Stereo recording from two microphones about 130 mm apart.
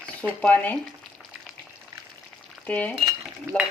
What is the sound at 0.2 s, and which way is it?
Speech, 15° left (ahead or behind).